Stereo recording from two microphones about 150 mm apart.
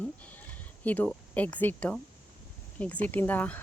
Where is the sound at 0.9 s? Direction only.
10° left (ahead or behind).